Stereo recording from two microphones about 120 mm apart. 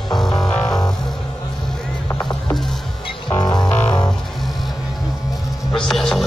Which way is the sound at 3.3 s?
35° left (ahead or behind).